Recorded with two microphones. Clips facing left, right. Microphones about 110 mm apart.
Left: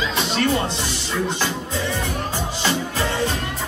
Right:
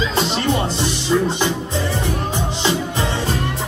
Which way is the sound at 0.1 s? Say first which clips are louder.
Right 2 dB; 25° right (ahead or behind).